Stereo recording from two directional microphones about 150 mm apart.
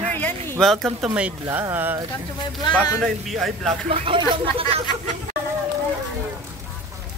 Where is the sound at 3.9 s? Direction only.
40° right (ahead or behind).